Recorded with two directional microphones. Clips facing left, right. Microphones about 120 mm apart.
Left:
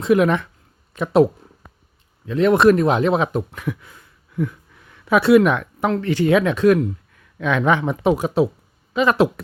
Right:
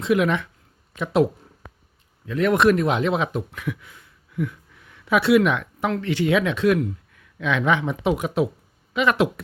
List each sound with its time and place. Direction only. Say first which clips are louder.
0.0 s speech: left 4 dB; 40° left (ahead or behind)
1.6 s a sound: right 3 dB; 85° right
2.2 s speech: left 4 dB; 25° left (ahead or behind)